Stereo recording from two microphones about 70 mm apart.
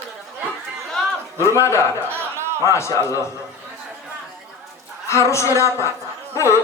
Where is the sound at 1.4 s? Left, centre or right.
Left.